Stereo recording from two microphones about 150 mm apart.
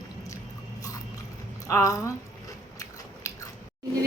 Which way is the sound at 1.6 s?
20° left (ahead or behind).